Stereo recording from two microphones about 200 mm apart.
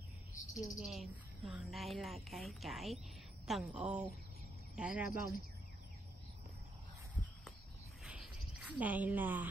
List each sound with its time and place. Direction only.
0.4 s cricket: 40° left (ahead or behind)
0.7 s a woman's voice: centre (ahead or behind)
8.0 s a sound: 5° right (ahead or behind)